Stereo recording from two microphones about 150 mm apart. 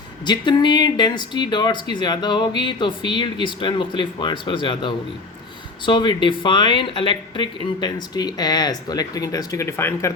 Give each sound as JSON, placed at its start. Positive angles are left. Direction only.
{"t": 0.3, "sound": "speech", "side_deg": 30}